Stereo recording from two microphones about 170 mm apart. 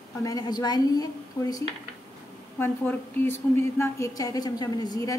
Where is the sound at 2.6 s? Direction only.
15° left (ahead or behind).